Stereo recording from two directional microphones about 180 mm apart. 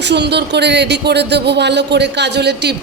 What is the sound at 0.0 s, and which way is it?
Speech, 70° right (ahead or behind).